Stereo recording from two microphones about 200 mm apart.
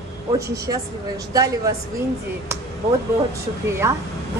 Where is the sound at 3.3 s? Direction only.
15° right (ahead or behind).